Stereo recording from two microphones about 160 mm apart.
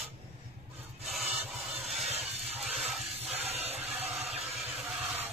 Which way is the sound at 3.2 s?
40° right (ahead or behind).